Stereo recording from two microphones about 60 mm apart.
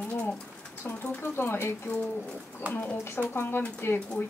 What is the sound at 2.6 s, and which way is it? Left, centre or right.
Speech, right.